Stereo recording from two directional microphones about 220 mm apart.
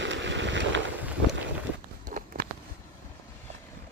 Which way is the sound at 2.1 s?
35° right (ahead or behind).